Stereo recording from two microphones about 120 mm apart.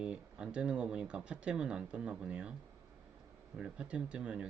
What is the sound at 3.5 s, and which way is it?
Speech, 10° right (ahead or behind).